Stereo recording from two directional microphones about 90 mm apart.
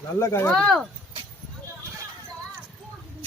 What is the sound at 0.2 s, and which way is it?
Speech, 30° left (ahead or behind).